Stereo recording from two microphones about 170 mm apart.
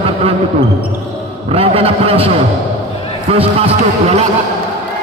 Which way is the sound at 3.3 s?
35° right (ahead or behind).